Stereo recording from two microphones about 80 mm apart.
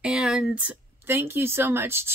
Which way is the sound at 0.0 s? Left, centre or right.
Centre.